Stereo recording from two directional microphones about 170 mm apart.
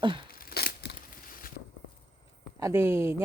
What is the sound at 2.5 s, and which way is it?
Speech, 15° right (ahead or behind).